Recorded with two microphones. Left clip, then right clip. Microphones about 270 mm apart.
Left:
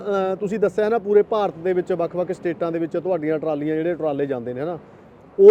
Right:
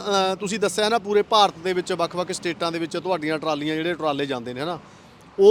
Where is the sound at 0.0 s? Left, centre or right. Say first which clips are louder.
Even; right.